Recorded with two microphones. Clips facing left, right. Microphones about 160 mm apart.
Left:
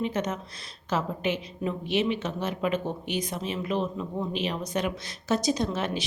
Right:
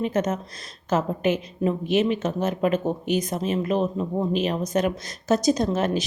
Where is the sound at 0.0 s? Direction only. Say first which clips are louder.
Right 5 dB; 45° right (ahead or behind).